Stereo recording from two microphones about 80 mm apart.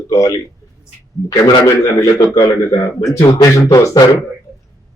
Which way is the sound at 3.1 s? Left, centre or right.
Left.